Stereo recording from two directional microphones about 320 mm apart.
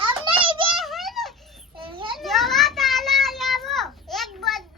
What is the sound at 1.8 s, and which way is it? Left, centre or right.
Children playing, centre.